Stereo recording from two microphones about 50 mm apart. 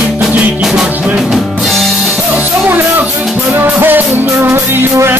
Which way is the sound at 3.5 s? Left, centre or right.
Right.